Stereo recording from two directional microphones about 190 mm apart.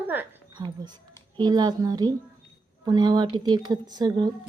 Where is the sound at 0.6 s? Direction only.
20° right (ahead or behind).